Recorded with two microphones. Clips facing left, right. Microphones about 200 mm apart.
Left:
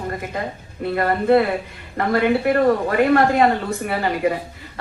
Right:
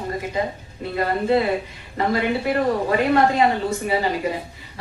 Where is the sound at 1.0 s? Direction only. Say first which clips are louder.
Left 3 dB; 55° left (ahead or behind).